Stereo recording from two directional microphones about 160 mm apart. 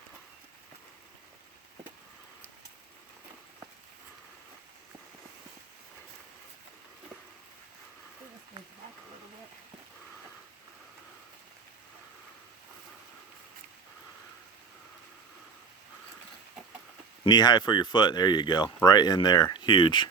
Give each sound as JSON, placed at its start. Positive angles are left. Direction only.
{"t": 17.2, "sound": "speech", "side_deg": 25}